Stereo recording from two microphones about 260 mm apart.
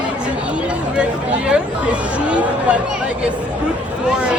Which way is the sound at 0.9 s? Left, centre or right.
Centre.